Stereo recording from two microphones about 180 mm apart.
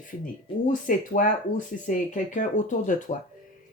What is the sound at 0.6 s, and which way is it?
Speech, 45° left (ahead or behind).